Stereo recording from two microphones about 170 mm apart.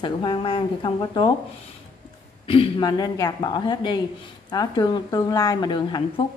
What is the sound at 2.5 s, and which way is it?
A woman's voice, 30° left (ahead or behind).